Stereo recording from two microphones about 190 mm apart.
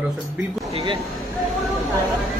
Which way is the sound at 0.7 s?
30° right (ahead or behind).